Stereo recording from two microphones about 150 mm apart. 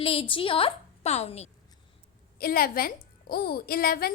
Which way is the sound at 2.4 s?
75° left (ahead or behind).